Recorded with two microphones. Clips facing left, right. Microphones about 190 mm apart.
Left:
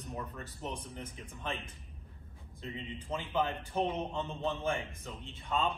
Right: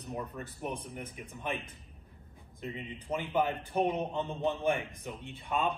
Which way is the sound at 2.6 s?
15° right (ahead or behind).